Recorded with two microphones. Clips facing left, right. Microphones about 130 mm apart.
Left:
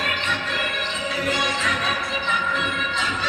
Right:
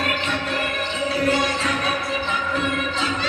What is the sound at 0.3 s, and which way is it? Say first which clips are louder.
Music: right 3 dB; 35° right (ahead or behind).